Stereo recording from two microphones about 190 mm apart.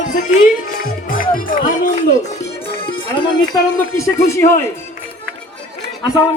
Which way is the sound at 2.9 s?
25° left (ahead or behind).